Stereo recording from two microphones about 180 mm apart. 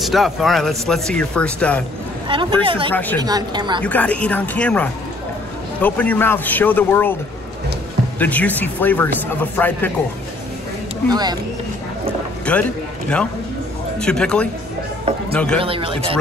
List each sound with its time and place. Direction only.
0.0 s speech: centre (ahead or behind)
2.2 s speech: 30° right (ahead or behind)
2.9 s speech: 10° left (ahead or behind)
3.2 s speech: 20° right (ahead or behind)
3.8 s speech: 10° left (ahead or behind)
8.2 s speech: 10° left (ahead or behind)
11.1 s speech: 20° right (ahead or behind)
12.5 s speech: 5° left (ahead or behind)
13.9 s speech: 5° left (ahead or behind)
15.6 s a man's voice: 30° right (ahead or behind)